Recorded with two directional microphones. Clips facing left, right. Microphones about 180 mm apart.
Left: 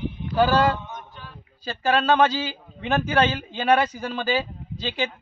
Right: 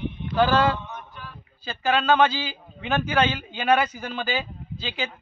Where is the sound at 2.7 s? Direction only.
30° left (ahead or behind).